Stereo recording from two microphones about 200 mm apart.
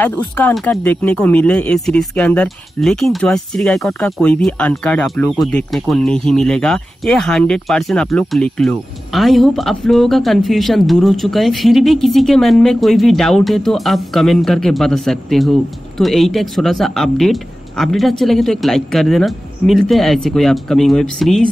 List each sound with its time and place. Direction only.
0.4 s speech: 10° left (ahead or behind)